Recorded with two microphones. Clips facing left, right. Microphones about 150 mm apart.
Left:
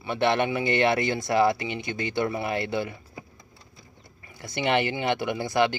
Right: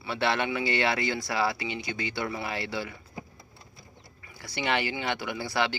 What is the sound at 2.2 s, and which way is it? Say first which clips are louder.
Speech: left 5 dB; 20° left (ahead or behind).